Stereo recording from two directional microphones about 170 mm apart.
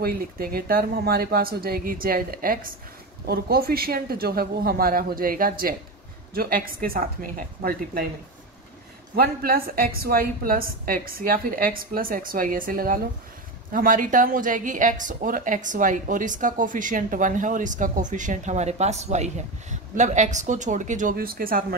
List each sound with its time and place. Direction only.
0.0 s a woman's voice: 60° right (ahead or behind)
9.1 s a woman's voice: 60° right (ahead or behind)